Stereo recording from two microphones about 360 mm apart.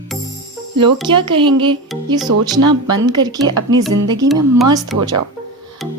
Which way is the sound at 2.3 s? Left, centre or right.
Right.